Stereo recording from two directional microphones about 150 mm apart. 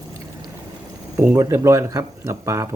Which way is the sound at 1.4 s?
20° right (ahead or behind).